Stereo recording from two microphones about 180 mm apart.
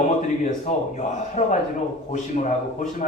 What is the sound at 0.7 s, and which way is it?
Speech, 45° left (ahead or behind).